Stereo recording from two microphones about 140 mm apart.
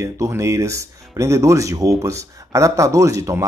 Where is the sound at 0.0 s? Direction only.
20° right (ahead or behind).